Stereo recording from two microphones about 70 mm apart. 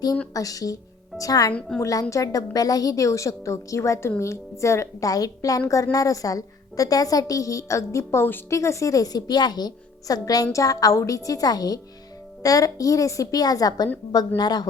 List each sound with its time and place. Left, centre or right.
0.3 s a woman's voice: left